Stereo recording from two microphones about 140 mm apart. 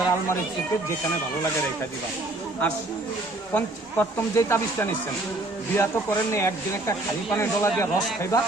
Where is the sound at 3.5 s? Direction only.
15° left (ahead or behind).